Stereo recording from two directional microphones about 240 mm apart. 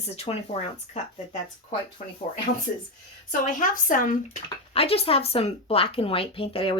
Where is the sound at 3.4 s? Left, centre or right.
Left.